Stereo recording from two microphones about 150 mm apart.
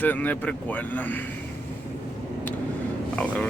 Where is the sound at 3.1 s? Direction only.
10° left (ahead or behind).